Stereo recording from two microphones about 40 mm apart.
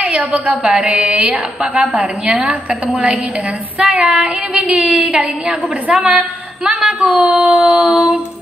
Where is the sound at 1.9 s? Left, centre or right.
Right.